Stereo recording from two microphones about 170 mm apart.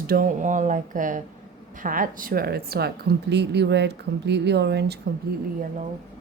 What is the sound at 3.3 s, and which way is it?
Speech, 80° right.